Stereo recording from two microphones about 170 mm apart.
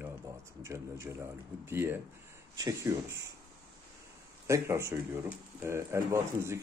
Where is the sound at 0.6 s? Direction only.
15° right (ahead or behind).